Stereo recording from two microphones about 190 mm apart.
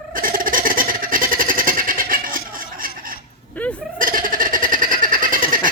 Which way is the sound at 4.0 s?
45° right (ahead or behind).